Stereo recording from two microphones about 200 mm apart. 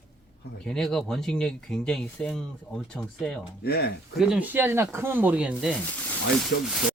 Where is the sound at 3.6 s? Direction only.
50° left (ahead or behind).